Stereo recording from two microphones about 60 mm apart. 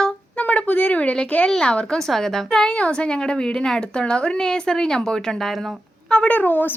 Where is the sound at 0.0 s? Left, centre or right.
Left.